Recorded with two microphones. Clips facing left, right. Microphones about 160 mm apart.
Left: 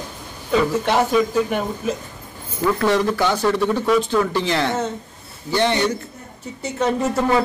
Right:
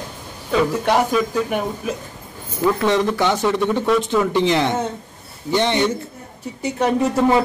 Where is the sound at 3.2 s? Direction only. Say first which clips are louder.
Even; 20° right (ahead or behind).